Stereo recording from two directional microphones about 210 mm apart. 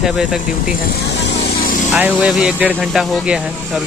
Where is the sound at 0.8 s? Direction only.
55° left (ahead or behind).